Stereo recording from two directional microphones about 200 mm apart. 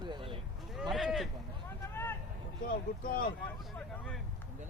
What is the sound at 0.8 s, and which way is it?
Speech, centre (ahead or behind).